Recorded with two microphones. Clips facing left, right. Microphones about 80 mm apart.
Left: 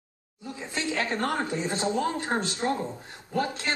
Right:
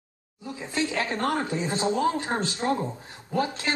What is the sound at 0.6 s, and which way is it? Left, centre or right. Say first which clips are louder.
Speech: right 2 dB; centre.